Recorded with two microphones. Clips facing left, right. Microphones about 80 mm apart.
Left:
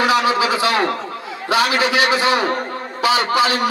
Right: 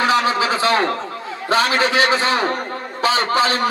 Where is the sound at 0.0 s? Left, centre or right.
Right.